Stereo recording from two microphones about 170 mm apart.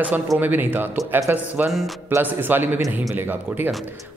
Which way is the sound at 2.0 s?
10° right (ahead or behind).